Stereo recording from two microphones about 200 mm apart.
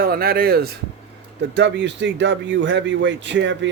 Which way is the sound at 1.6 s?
60° right (ahead or behind).